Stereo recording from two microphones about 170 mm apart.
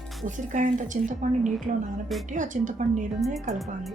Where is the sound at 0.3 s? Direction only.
50° right (ahead or behind).